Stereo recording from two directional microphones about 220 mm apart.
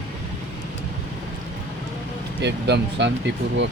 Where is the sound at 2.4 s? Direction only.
50° right (ahead or behind).